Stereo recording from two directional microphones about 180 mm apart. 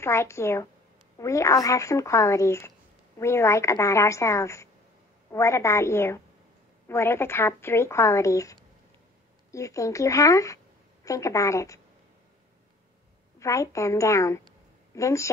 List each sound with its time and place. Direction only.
0.0 s a woman's voice: 15° left (ahead or behind)
13.4 s a woman's voice: 15° left (ahead or behind)